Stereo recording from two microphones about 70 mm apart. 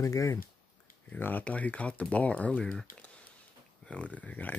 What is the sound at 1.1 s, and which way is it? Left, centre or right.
Speech, left.